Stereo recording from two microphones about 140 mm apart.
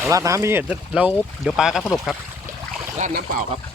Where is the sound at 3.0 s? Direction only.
60° right (ahead or behind).